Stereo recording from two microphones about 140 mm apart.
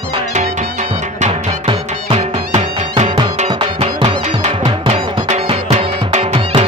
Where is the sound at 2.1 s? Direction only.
55° right (ahead or behind).